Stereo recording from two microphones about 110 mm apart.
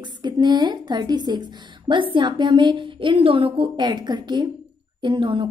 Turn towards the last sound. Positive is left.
turn(degrees=-50)  # may be behind; listen again after turning